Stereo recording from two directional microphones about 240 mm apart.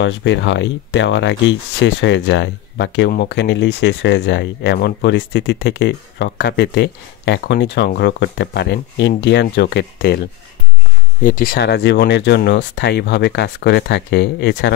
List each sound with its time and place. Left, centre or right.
0.0 s speech: left